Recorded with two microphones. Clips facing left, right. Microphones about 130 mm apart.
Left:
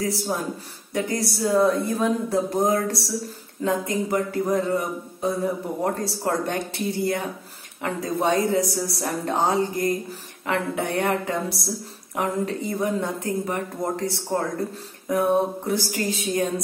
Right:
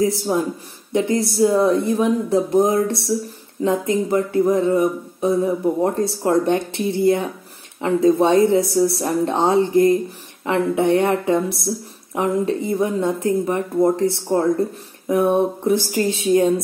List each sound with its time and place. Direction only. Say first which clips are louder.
0.9 s speech: right 7 dB; 25° right (ahead or behind)